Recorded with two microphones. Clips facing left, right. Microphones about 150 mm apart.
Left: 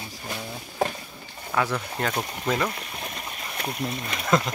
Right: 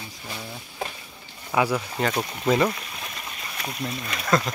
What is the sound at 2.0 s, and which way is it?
Speech, centre (ahead or behind).